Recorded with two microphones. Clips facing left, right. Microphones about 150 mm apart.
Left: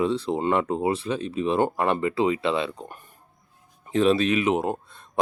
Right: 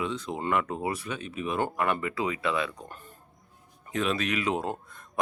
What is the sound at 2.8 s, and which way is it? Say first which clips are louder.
Speech: left 2 dB; 15° left (ahead or behind).